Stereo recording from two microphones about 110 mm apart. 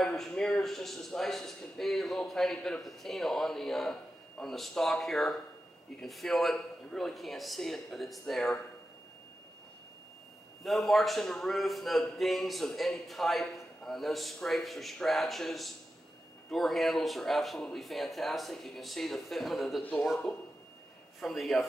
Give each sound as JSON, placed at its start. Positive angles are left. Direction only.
{"t": 0.0, "sound": "a man's voice", "side_deg": 5}
{"t": 10.6, "sound": "a man's voice", "side_deg": 0}
{"t": 19.8, "sound": "speech", "side_deg": 15}
{"t": 21.2, "sound": "a man's voice", "side_deg": 0}